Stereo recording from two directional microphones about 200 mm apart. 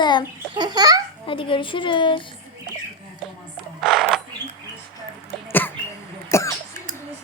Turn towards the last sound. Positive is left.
turn(degrees=15)  # may be behind; listen again after turning